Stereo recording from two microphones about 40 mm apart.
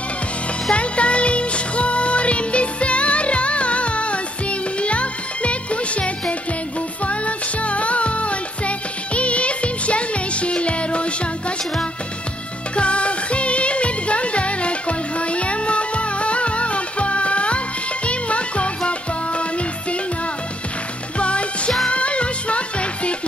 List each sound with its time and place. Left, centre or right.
0.7 s music: left
21.2 s music: left